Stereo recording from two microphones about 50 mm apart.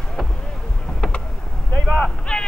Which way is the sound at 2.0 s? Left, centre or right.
Centre.